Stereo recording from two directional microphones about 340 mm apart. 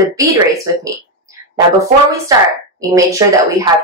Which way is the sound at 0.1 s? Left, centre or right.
Centre.